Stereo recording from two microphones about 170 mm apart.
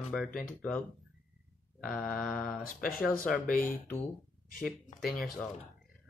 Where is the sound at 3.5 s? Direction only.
55° left (ahead or behind).